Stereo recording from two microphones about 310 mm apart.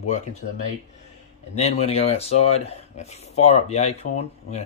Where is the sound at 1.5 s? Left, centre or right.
Centre.